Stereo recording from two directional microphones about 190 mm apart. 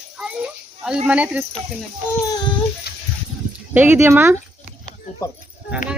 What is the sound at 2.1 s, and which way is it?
Child singing, 15° left (ahead or behind).